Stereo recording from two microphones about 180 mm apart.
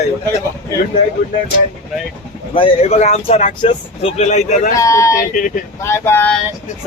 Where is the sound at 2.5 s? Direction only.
35° left (ahead or behind).